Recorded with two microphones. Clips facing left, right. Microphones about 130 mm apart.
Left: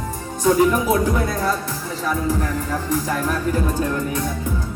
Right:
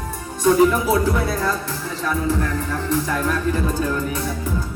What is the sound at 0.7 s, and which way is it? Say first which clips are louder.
Music: left 1 dB; 15° left (ahead or behind).